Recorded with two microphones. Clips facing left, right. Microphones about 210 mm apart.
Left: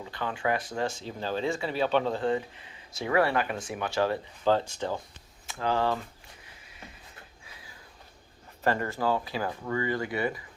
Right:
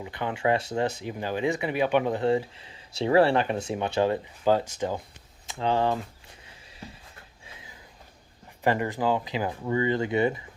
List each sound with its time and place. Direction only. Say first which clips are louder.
0.0 s speech: right 4 dB; 20° right (ahead or behind)
7.4 s a sound: right 3 dB; 20° right (ahead or behind)
8.6 s speech: right 3 dB; 15° right (ahead or behind)